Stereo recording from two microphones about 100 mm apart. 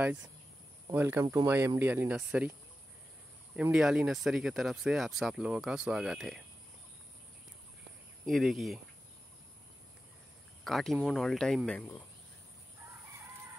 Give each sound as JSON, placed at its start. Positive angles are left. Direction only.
{"t": 0.0, "sound": "speech", "side_deg": -10}
{"t": 0.9, "sound": "speech", "side_deg": -20}
{"t": 2.0, "sound": "speech", "side_deg": -15}
{"t": 3.7, "sound": "speech", "side_deg": -10}
{"t": 8.3, "sound": "speech", "side_deg": 0}
{"t": 10.6, "sound": "speech", "side_deg": 0}